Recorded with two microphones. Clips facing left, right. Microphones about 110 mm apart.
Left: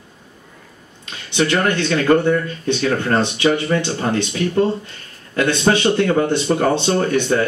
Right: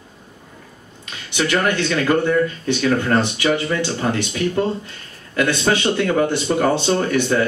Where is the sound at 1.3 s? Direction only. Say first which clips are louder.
Left 2 dB; 20° left (ahead or behind).